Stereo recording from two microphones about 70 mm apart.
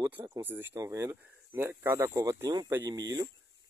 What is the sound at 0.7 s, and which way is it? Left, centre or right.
A man's voice, right.